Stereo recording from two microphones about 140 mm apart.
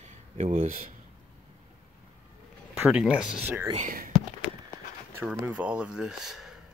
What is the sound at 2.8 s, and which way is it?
Speech, 10° right (ahead or behind).